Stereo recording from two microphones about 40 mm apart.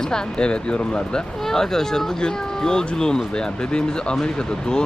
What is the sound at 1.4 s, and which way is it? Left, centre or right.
Speech, centre.